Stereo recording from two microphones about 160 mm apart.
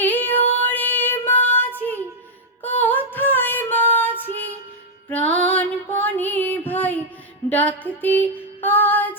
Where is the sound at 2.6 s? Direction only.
10° left (ahead or behind).